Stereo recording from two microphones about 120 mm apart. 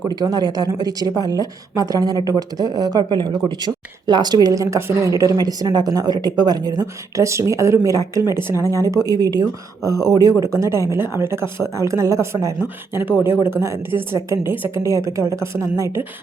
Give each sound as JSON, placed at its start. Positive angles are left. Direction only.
{"t": 0.1, "sound": "a woman's voice", "side_deg": -35}
{"t": 8.5, "sound": "speech", "side_deg": 25}
{"t": 8.8, "sound": "a woman's voice", "side_deg": -30}